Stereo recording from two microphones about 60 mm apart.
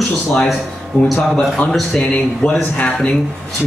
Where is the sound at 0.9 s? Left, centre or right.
Left.